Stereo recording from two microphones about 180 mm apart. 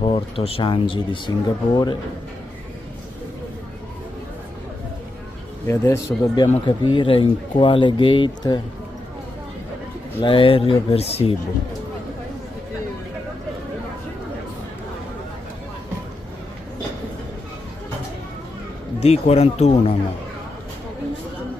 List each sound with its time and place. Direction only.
0.0 s speech: 30° left (ahead or behind)
5.7 s speech: 15° left (ahead or behind)
6.9 s speech: 30° left (ahead or behind)
10.2 s speech: 30° left (ahead or behind)
18.9 s speech: 35° left (ahead or behind)